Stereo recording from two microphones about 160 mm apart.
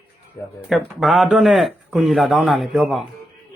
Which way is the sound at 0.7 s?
Centre (ahead or behind).